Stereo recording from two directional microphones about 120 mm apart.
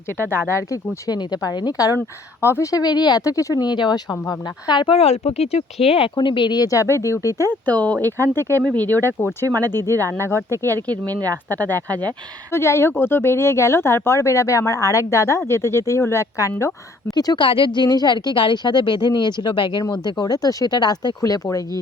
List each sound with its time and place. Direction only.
0.2 s speech: 20° left (ahead or behind)
2.0 s speech: 20° left (ahead or behind); by 4.9 s 40° left (ahead or behind)
4.9 s speech: 65° left (ahead or behind)
5.8 s speech: 50° left (ahead or behind); by 7.4 s 25° left (ahead or behind)
7.6 s speech: 10° left (ahead or behind)
8.4 s speech: 25° right (ahead or behind)
9.0 s speech: 20° left (ahead or behind)
9.9 s speech: 25° right (ahead or behind)
12.5 s speech: 20° left (ahead or behind)
17.2 s speech: 40° left (ahead or behind)